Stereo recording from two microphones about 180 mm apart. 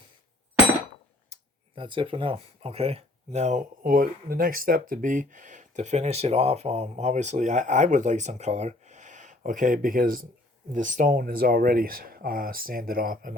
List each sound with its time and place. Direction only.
1.3 s speech: 25° right (ahead or behind); by 13.3 s 50° right (ahead or behind)